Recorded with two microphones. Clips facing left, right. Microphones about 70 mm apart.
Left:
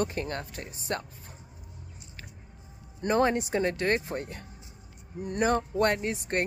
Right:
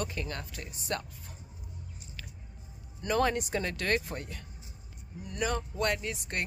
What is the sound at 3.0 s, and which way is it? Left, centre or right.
Speech, left.